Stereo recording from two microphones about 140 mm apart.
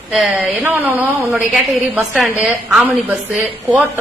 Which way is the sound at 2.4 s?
5° right (ahead or behind).